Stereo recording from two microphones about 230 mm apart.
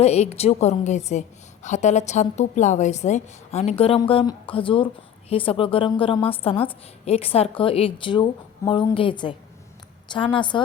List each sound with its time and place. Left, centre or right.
0.0 s a woman's voice: left